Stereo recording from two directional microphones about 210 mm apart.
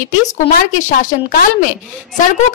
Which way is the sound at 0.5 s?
40° left (ahead or behind).